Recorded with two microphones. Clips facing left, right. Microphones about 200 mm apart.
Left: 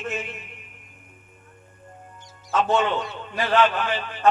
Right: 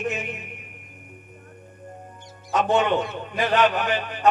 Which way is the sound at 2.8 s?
55° right (ahead or behind).